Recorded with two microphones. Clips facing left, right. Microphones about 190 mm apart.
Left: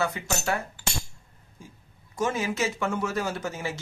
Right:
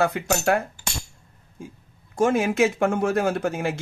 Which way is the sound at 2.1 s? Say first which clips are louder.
Right 7 dB; 55° right (ahead or behind).